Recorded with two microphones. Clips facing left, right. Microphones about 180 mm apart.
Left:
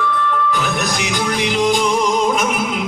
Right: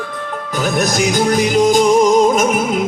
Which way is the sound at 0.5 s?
45° right (ahead or behind).